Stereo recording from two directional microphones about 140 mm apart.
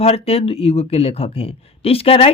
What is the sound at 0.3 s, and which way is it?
Speech, 45° left (ahead or behind).